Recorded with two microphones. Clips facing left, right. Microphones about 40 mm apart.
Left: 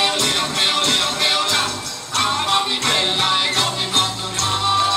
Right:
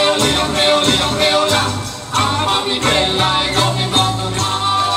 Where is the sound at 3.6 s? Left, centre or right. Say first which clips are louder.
Right 4 dB; right.